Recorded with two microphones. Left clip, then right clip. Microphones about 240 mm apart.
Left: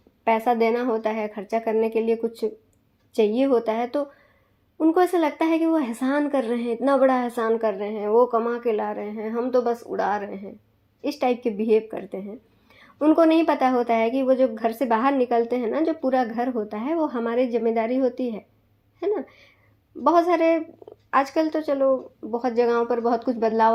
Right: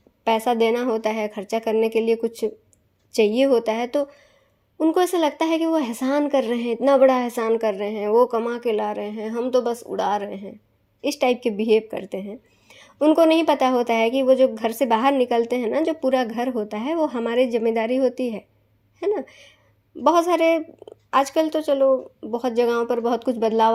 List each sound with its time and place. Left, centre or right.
0.3 s speech: right